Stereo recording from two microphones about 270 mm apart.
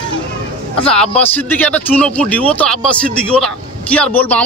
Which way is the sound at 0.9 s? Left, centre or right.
Centre.